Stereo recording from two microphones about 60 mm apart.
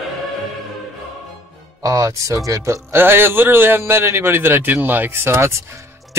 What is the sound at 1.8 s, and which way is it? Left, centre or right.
Speech, right.